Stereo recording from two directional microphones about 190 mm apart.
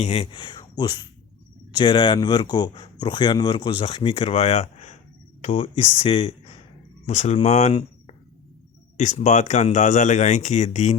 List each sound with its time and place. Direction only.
0.0 s speech: 30° left (ahead or behind)